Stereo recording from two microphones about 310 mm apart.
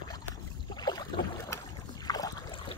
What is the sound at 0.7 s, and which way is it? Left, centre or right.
Boat, centre.